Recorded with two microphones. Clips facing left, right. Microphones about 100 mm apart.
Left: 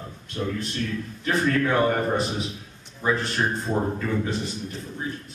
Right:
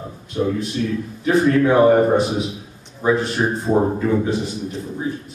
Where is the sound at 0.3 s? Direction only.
10° right (ahead or behind).